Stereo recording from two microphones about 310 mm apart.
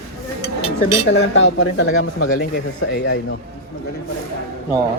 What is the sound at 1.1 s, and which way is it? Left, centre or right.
Speech, left.